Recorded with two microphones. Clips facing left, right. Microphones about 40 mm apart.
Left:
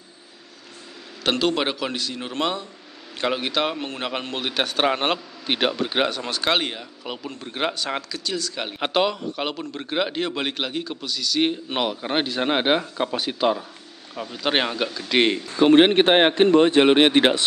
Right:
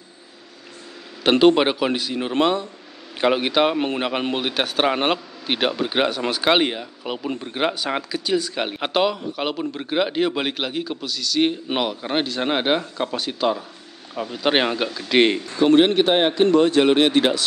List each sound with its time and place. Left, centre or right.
1.3 s speech: centre
3.7 s speech: right
4.5 s a man's voice: centre
8.7 s a man's voice: centre
14.4 s speech: centre
15.6 s a man's voice: left
16.5 s speech: left